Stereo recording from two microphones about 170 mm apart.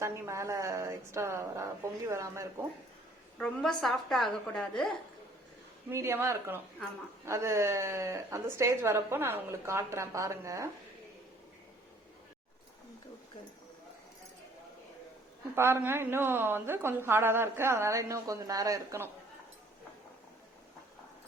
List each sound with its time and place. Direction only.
0.0 s a woman's voice: 15° right (ahead or behind)
3.3 s a woman's voice: 5° left (ahead or behind)
5.9 s a woman's voice: 15° right (ahead or behind)
15.5 s a woman's voice: 15° right (ahead or behind)